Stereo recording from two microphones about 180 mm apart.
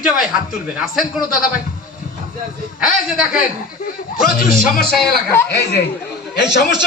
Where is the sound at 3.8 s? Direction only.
55° left (ahead or behind).